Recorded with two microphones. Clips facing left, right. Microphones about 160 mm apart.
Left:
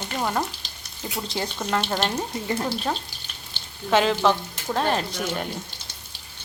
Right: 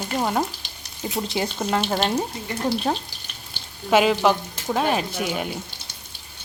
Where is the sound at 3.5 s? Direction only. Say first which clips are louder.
Right 2 dB; 10° right (ahead or behind).